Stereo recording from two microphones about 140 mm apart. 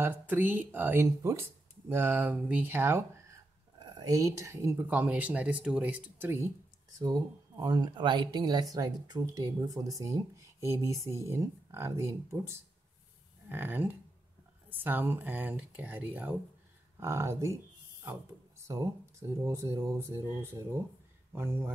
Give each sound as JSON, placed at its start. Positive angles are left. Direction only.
{"t": 0.0, "sound": "speech", "side_deg": -15}
{"t": 7.0, "sound": "speech", "side_deg": -30}
{"t": 19.4, "sound": "speech", "side_deg": -20}